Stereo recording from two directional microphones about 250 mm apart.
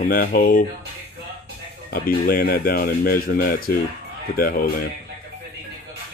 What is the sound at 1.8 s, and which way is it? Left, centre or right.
Speech, left.